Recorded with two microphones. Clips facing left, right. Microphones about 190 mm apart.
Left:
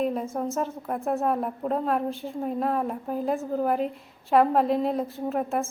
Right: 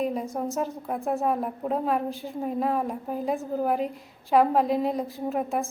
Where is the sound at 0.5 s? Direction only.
Centre (ahead or behind).